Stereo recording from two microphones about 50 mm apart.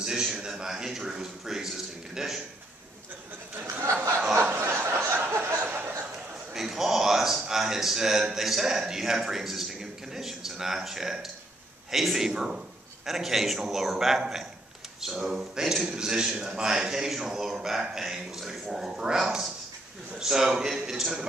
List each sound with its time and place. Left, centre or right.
0.0 s a man's voice: centre
3.8 s a sound: right
4.4 s chuckle: right
6.5 s a man's voice: centre